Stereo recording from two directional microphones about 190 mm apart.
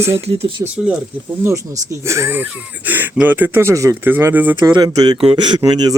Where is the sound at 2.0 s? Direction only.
15° right (ahead or behind).